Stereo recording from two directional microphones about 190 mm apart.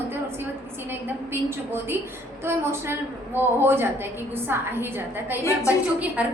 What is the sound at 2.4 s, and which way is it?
A woman's voice, 15° right (ahead or behind).